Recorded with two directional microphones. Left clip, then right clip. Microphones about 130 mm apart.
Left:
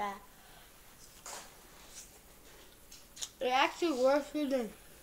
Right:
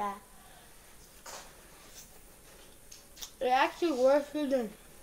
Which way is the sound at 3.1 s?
5° right (ahead or behind).